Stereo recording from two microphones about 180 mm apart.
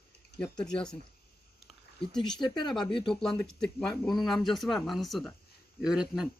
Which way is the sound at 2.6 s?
25° left (ahead or behind).